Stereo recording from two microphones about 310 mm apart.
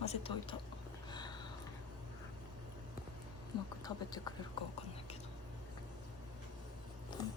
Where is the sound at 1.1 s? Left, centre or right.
Centre.